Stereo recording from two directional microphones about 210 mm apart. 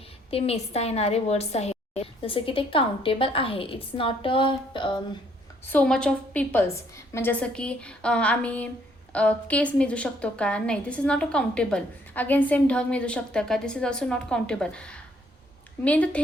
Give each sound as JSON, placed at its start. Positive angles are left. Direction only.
{"t": 0.3, "sound": "a woman's voice", "side_deg": 30}
{"t": 5.6, "sound": "a woman's voice", "side_deg": 5}